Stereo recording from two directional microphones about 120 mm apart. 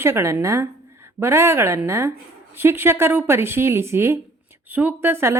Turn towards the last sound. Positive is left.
turn(degrees=-20)  # may be behind; listen again after turning